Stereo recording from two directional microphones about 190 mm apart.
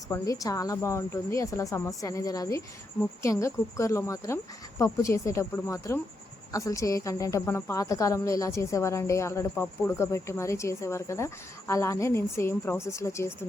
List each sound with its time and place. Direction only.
0.1 s a woman's voice: 15° left (ahead or behind)